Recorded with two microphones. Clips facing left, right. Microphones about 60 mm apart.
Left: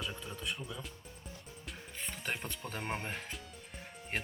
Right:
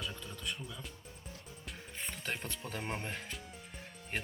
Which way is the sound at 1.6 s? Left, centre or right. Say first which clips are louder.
Even; centre.